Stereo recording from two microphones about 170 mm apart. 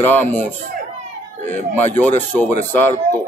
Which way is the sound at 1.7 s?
10° left (ahead or behind).